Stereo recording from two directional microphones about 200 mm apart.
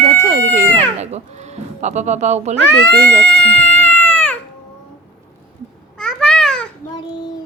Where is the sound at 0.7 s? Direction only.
35° right (ahead or behind).